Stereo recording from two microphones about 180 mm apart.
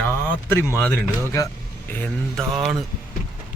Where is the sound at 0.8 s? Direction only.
10° left (ahead or behind).